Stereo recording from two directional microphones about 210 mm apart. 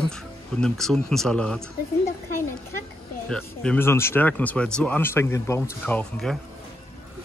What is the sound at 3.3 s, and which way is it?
Speech, 5° left (ahead or behind).